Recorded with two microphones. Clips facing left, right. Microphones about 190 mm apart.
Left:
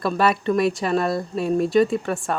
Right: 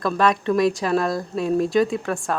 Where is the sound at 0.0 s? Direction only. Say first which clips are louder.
Even; 5° left (ahead or behind).